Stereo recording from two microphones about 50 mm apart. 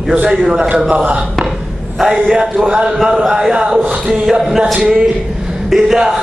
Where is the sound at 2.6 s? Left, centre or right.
Centre.